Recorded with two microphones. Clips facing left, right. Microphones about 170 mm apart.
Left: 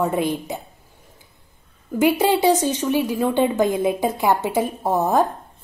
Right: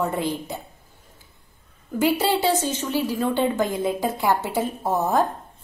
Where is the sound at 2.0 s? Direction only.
15° left (ahead or behind).